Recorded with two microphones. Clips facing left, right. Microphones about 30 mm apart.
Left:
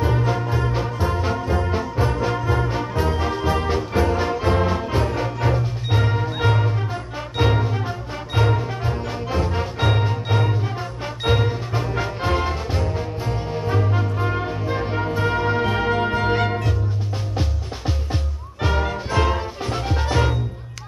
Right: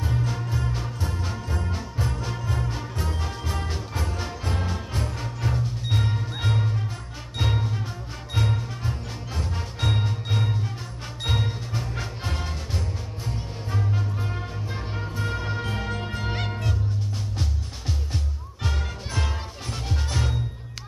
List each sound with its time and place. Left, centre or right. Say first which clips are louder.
0.0 s music: left 8 dB; left
18.6 s music: left 10 dB; left